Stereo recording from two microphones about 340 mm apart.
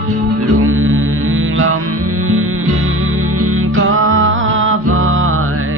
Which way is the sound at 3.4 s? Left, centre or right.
Right.